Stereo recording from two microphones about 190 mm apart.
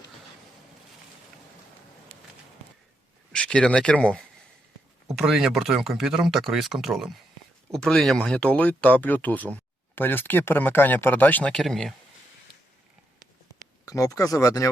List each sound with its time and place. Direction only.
3.3 s speech: 5° left (ahead or behind)
13.8 s speech: 20° left (ahead or behind)